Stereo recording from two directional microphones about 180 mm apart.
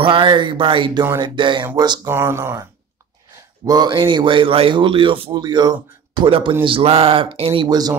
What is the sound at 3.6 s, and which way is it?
Speech, 25° right (ahead or behind).